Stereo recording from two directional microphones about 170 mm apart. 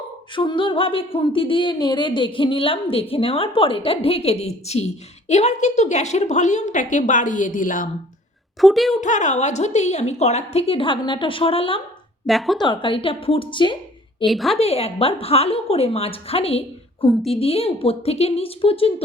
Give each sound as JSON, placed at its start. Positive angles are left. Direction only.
{"t": 0.3, "sound": "a woman's voice", "side_deg": 30}
{"t": 8.6, "sound": "a woman's voice", "side_deg": 0}
{"t": 9.0, "sound": "speech", "side_deg": 45}
{"t": 12.2, "sound": "a woman's voice", "side_deg": 0}
{"t": 12.5, "sound": "a woman's voice", "side_deg": 25}
{"t": 14.3, "sound": "a woman's voice", "side_deg": 0}
{"t": 14.6, "sound": "speech", "side_deg": 35}